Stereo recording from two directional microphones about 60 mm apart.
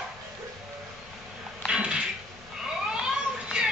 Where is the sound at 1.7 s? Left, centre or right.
Centre.